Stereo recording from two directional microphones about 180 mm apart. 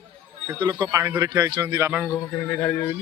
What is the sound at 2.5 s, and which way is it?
Speech, 10° left (ahead or behind).